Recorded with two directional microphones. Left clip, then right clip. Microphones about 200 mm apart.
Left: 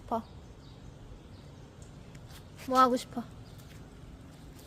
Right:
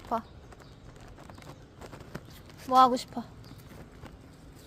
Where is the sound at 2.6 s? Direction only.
5° right (ahead or behind).